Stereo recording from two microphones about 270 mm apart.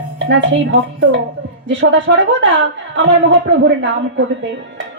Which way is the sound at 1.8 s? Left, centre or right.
Right.